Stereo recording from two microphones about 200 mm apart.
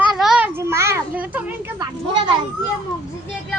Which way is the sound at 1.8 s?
20° right (ahead or behind).